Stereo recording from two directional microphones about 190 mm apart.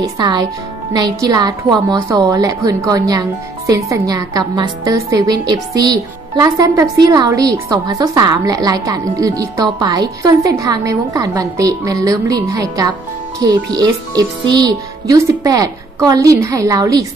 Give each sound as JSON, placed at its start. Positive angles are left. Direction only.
{"t": 0.0, "sound": "a woman's voice", "side_deg": -20}